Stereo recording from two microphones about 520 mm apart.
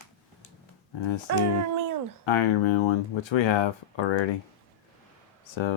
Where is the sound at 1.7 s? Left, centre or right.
Right.